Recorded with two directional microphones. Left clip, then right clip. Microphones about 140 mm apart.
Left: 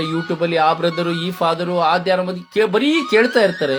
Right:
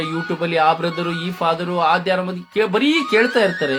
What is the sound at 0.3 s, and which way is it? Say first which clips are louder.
Speech: even; 35° left (ahead or behind).